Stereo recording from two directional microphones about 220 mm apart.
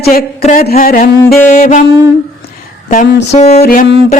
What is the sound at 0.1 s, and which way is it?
Music, 40° left (ahead or behind).